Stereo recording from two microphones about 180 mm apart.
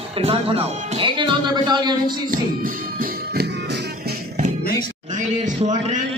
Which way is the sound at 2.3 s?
50° right (ahead or behind).